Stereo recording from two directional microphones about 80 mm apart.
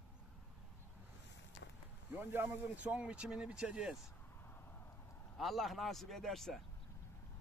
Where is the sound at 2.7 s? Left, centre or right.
Centre.